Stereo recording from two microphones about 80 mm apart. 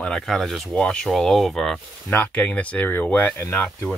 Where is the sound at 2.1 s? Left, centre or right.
Left.